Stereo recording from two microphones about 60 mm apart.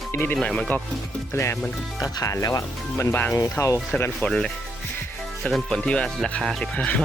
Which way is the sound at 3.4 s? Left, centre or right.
Left.